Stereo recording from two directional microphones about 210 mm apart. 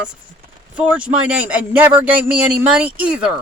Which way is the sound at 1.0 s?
5° right (ahead or behind).